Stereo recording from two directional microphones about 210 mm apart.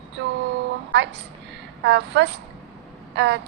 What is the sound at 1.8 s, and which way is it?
A woman's voice, 55° right (ahead or behind).